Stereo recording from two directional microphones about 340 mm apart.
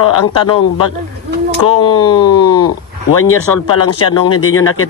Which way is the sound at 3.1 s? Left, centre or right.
Left.